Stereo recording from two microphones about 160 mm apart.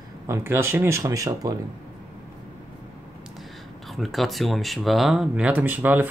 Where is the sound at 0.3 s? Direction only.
15° right (ahead or behind).